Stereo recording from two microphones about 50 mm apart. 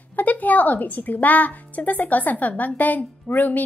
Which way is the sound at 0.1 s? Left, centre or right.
Left.